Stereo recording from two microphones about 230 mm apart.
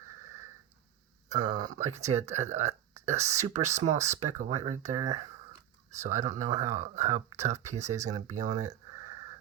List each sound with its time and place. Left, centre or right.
1.5 s speech: centre
1.8 s speech: right